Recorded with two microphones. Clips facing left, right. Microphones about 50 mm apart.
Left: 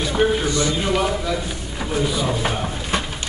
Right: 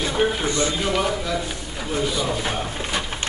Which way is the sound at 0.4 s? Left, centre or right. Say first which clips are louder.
Left 2 dB; right.